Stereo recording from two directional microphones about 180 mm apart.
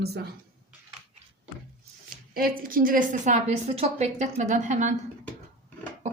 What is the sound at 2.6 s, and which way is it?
A woman's voice, 50° right (ahead or behind).